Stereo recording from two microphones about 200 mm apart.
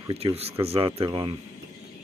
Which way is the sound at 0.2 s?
25° right (ahead or behind).